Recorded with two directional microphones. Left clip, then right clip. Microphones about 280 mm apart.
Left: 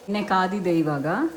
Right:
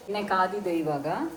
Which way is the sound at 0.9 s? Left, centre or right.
Left.